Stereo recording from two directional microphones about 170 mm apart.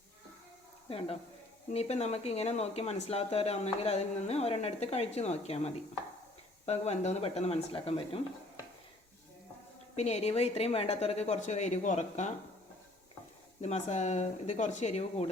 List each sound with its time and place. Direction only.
0.9 s speech: 35° left (ahead or behind)
9.9 s speech: 40° left (ahead or behind)
13.6 s speech: 40° left (ahead or behind)